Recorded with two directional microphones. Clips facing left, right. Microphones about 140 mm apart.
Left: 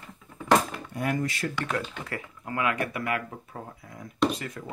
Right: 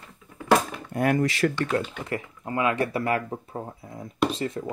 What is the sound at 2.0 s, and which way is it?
Speech, 20° right (ahead or behind).